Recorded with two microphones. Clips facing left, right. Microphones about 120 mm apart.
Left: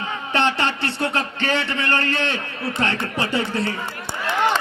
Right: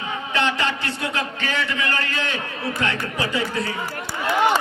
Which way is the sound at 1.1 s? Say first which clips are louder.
Left 3 dB; 30° left (ahead or behind).